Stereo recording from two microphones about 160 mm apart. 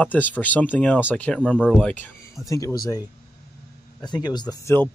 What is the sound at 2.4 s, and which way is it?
Speech, 20° left (ahead or behind).